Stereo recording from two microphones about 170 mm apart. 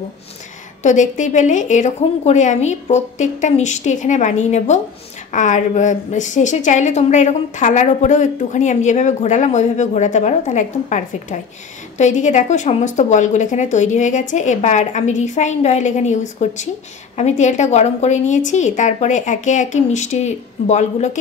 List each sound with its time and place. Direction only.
0.8 s a woman's voice: 45° left (ahead or behind)